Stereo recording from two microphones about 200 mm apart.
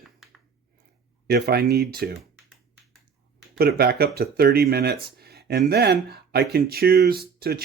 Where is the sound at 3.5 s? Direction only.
50° right (ahead or behind).